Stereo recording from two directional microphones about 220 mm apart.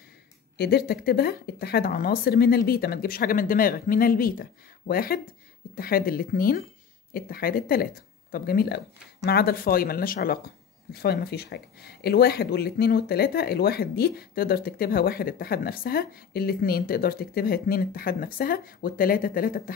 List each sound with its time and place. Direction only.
0.6 s speech: 45° left (ahead or behind)